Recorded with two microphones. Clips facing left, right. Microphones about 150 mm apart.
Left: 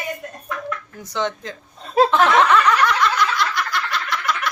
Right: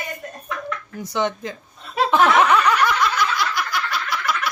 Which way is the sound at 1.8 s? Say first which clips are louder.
Left 6 dB; 40° left (ahead or behind).